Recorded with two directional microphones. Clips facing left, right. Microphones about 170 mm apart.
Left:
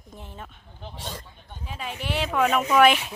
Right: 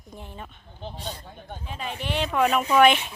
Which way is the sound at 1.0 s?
80° left.